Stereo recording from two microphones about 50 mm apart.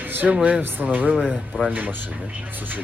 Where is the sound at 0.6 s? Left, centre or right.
Right.